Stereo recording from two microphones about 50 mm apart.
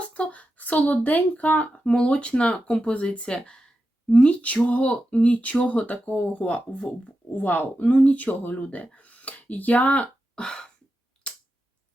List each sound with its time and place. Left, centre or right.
0.0 s speech: left
7.3 s speech: left
10.4 s a sound: centre